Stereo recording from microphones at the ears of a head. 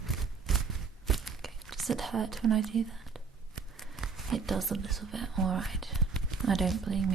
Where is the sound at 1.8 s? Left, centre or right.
Right.